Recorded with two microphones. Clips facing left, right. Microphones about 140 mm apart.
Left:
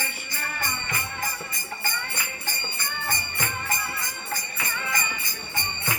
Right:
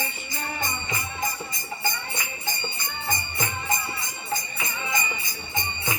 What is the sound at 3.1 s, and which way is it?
Music, 20° right (ahead or behind).